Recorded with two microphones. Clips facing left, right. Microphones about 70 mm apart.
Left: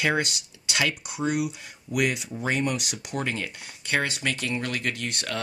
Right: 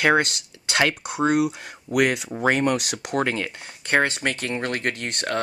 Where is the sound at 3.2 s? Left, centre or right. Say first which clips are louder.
Right 5 dB; right.